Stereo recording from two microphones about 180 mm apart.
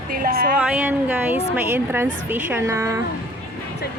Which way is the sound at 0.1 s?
55° right (ahead or behind).